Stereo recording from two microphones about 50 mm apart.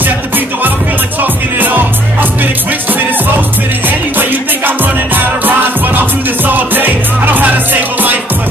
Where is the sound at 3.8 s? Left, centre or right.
Right.